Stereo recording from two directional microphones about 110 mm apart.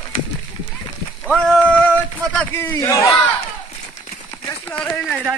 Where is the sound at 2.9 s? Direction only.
30° left (ahead or behind).